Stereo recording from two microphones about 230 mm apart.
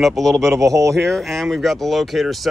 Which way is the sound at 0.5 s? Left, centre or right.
Centre.